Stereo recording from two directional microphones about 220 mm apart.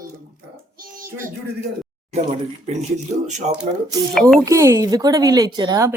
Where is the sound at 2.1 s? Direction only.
30° right (ahead or behind).